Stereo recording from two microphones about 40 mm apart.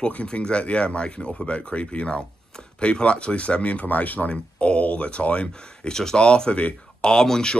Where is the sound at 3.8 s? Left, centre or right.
Left.